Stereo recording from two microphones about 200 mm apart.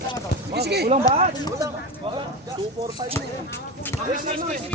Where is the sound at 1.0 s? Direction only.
20° left (ahead or behind).